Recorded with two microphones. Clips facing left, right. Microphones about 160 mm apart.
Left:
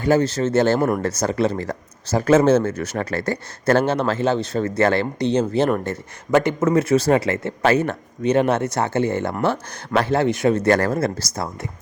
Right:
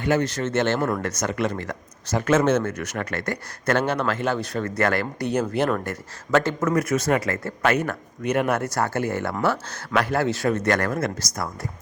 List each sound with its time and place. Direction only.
0.0 s a man's voice: 30° left (ahead or behind)
6.7 s speech: 30° left (ahead or behind)
10.5 s speech: 30° left (ahead or behind)